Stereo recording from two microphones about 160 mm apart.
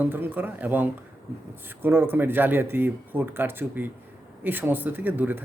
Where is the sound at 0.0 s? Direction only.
10° right (ahead or behind).